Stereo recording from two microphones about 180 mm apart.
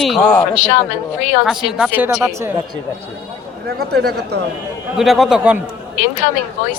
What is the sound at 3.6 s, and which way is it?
Speech, 60° right (ahead or behind).